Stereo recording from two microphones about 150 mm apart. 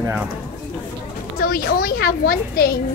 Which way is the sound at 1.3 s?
80° left.